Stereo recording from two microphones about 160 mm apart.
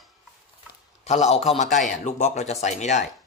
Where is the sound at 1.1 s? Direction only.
40° left (ahead or behind).